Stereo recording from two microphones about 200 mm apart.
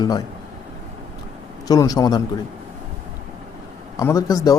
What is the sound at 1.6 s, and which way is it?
Speech, 20° left (ahead or behind).